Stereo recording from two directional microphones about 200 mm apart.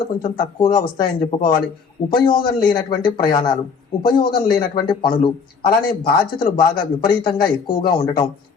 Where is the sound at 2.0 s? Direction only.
25° left (ahead or behind).